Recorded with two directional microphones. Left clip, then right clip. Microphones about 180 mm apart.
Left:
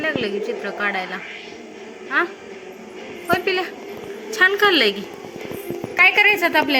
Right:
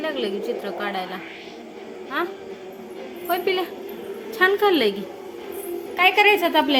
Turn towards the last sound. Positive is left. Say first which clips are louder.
# left 1 dB
turn(degrees=-15)  # may be behind; listen again after turning